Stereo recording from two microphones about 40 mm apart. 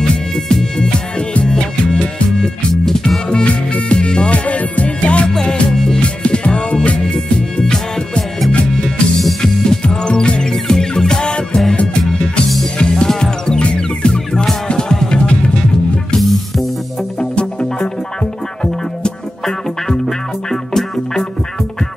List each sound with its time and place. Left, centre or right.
0.0 s music: left
2.7 s music: centre; by 5.3 s left
5.3 s music: centre
12.0 s music: centre
12.9 s music: centre
16.2 s music: centre
17.2 s music: left